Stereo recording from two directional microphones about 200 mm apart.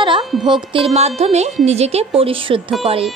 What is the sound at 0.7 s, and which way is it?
A woman's voice, 30° right (ahead or behind).